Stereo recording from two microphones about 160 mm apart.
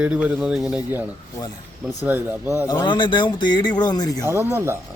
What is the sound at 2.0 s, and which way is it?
Speech, 10° right (ahead or behind).